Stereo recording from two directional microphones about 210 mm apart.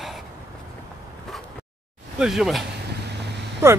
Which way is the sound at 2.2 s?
Centre (ahead or behind).